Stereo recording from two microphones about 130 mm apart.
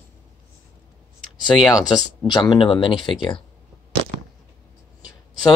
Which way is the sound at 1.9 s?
35° left (ahead or behind).